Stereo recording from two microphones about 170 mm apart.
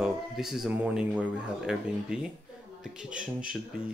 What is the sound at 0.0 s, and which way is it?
Speech, centre (ahead or behind).